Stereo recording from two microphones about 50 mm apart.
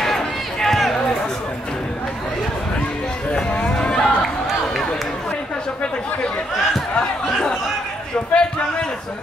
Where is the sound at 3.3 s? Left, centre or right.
Left.